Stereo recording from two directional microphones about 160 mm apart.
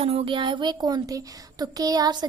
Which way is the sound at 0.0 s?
40° right (ahead or behind).